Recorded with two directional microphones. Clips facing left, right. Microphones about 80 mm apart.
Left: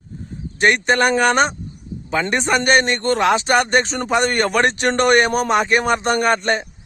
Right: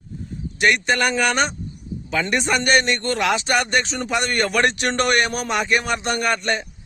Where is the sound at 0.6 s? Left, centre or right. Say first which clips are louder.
Left 3 dB; left.